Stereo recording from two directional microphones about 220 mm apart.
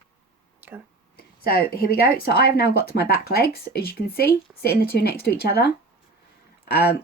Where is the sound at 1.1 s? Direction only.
45° left (ahead or behind).